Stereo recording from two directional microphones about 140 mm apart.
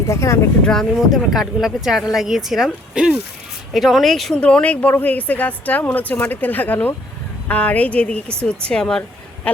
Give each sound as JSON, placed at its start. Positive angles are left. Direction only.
{"t": 0.1, "sound": "speech", "side_deg": 20}
{"t": 0.6, "sound": "a woman's voice", "side_deg": 5}